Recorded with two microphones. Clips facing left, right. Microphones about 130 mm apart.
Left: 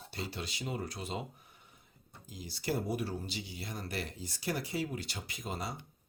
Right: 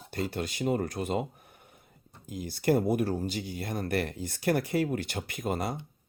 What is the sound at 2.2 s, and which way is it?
Speech, 55° right (ahead or behind).